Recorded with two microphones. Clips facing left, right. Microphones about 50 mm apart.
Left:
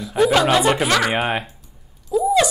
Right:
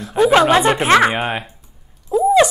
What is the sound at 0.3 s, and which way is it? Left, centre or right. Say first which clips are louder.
Speech: right 5 dB; right.